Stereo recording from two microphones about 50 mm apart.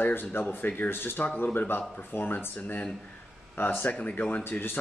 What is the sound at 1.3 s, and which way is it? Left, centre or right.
Speech, left.